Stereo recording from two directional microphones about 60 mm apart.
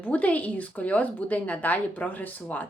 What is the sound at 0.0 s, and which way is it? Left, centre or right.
A woman's voice, left.